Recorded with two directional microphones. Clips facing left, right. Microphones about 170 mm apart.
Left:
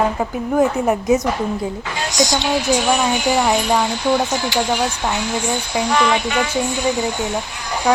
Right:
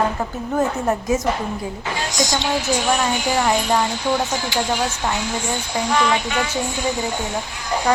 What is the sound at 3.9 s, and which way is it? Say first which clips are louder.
Speech: left 3 dB; 70° left (ahead or behind).